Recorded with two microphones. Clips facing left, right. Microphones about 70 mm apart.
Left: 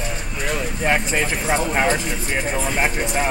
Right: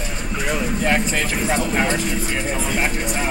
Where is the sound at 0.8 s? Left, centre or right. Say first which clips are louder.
Left 2 dB; centre.